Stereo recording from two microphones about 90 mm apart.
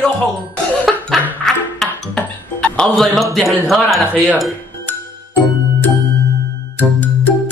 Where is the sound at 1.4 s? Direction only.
10° left (ahead or behind).